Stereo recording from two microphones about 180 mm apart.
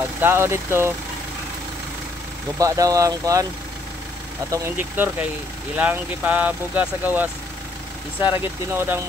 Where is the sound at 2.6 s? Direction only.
20° right (ahead or behind).